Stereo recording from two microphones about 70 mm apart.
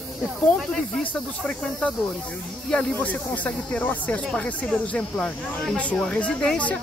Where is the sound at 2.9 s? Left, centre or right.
Left.